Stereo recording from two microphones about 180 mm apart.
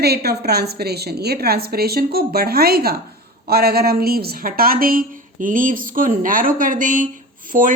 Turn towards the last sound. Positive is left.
turn(degrees=-50)  # may be behind; listen again after turning